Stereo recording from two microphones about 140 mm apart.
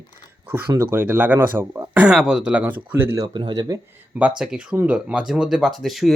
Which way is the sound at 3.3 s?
35° right (ahead or behind).